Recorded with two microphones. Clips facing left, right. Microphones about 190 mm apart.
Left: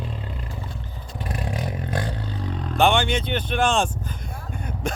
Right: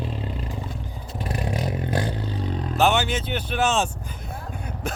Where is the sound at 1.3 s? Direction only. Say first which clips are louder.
Right 2 dB; 25° right (ahead or behind).